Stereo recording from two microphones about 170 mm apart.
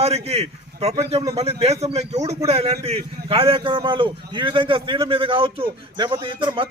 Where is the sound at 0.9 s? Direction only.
20° right (ahead or behind).